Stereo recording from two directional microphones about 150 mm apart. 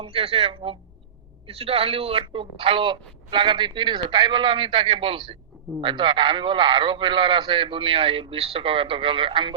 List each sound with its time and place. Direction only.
0.0 s speech: 40° right (ahead or behind)